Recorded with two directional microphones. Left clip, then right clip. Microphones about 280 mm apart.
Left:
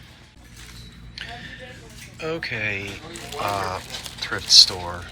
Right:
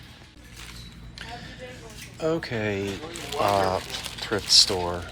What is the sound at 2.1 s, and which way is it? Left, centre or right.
Speech, centre.